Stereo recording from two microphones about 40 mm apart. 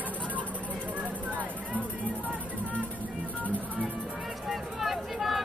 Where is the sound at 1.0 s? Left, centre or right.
Right.